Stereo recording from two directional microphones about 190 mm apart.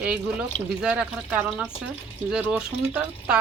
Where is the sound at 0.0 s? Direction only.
5° right (ahead or behind).